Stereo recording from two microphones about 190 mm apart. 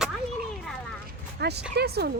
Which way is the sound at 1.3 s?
60° right (ahead or behind).